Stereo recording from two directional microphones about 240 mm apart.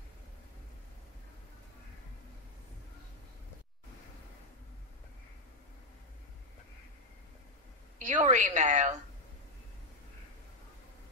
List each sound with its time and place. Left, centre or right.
8.0 s a woman's voice: right